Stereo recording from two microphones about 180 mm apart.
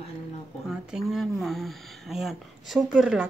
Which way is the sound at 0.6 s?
Centre (ahead or behind).